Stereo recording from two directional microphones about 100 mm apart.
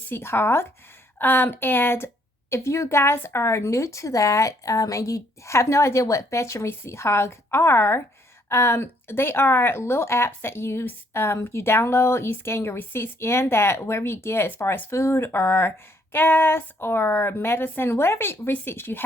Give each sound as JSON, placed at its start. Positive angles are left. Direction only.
{"t": 0.1, "sound": "a woman's voice", "side_deg": 25}